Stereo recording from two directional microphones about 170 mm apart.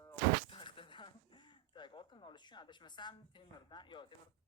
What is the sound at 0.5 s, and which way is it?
Speech, 30° left (ahead or behind).